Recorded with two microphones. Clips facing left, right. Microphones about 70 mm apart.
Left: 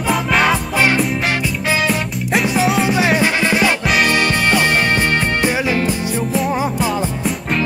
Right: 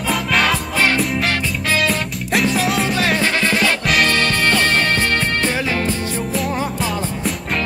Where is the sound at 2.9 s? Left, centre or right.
Centre.